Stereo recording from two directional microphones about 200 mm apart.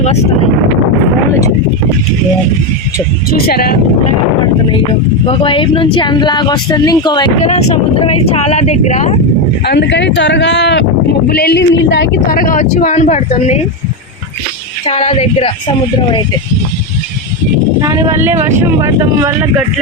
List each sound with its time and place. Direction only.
3.2 s speech: 50° left (ahead or behind)
5.2 s speech: 25° left (ahead or behind)
7.4 s speech: 35° left (ahead or behind)
9.6 s speech: 55° left (ahead or behind); by 13.6 s 35° left (ahead or behind)
14.8 s speech: 30° left (ahead or behind)
17.7 s speech: 15° right (ahead or behind)